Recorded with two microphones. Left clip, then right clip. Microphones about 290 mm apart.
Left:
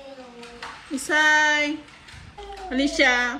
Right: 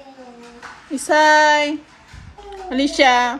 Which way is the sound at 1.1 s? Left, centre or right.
Centre.